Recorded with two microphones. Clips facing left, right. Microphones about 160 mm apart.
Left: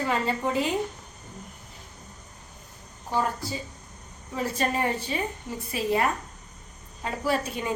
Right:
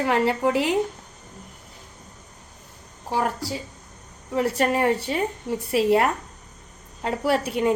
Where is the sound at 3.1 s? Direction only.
75° right (ahead or behind).